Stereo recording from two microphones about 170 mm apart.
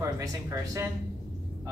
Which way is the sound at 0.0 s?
20° right (ahead or behind).